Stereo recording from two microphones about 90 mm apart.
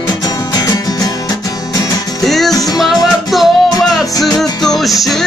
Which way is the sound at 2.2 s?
5° left (ahead or behind).